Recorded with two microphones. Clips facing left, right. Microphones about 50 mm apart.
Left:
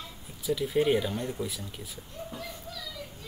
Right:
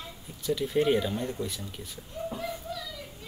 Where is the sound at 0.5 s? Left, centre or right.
Centre.